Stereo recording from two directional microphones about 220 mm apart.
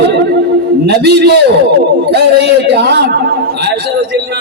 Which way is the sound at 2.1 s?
50° right (ahead or behind).